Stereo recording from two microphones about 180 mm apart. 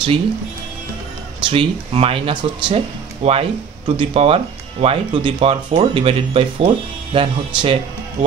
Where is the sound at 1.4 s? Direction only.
30° right (ahead or behind).